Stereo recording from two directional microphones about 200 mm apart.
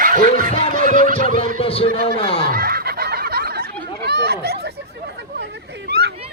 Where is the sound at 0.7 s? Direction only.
40° right (ahead or behind).